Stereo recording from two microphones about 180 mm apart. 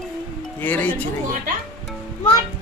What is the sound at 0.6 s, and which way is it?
Speech, 10° left (ahead or behind).